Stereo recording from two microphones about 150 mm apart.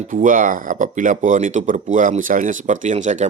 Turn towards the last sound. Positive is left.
turn(degrees=-55)  # may be behind; listen again after turning